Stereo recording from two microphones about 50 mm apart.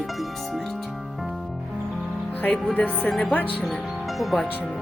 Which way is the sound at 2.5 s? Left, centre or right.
Left.